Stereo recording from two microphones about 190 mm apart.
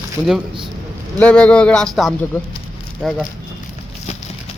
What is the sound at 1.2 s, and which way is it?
Speech, 5° left (ahead or behind).